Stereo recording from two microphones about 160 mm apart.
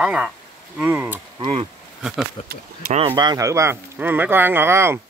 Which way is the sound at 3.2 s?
25° right (ahead or behind).